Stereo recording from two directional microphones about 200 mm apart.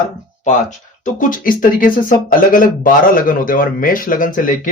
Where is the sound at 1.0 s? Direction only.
40° left (ahead or behind).